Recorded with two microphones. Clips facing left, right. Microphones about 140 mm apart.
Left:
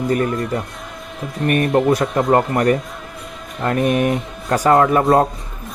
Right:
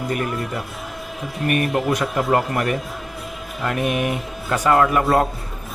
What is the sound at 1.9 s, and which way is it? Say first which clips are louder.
Speech: left 4 dB; 35° left (ahead or behind).